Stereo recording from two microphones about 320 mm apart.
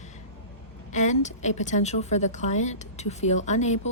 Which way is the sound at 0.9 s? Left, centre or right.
Left.